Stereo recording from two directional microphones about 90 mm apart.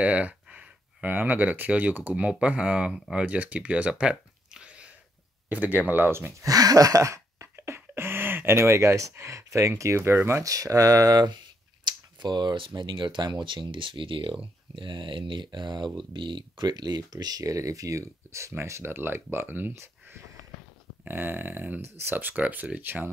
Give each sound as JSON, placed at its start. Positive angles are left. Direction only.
{"t": 0.0, "sound": "speech", "side_deg": -15}
{"t": 6.4, "sound": "a sound", "side_deg": -45}
{"t": 10.5, "sound": "speech", "side_deg": -40}
{"t": 11.8, "sound": "speech", "side_deg": -55}